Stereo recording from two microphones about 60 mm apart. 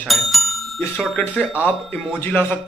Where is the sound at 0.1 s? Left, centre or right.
Centre.